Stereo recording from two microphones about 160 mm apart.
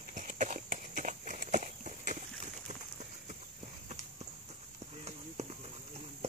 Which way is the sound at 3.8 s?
45° right (ahead or behind).